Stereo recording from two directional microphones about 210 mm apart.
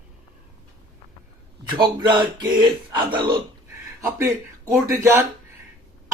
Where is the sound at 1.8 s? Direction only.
20° right (ahead or behind).